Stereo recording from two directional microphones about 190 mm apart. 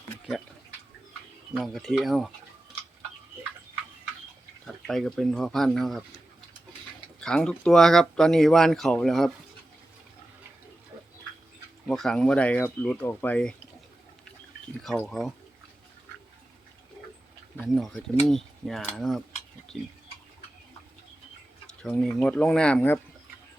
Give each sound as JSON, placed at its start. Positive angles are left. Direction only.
{"t": 1.5, "sound": "speech", "side_deg": 0}
{"t": 4.6, "sound": "speech", "side_deg": 0}
{"t": 7.2, "sound": "speech", "side_deg": 5}
{"t": 11.9, "sound": "speech", "side_deg": 0}
{"t": 14.8, "sound": "speech", "side_deg": 0}
{"t": 17.7, "sound": "speech", "side_deg": 0}
{"t": 21.8, "sound": "speech", "side_deg": 5}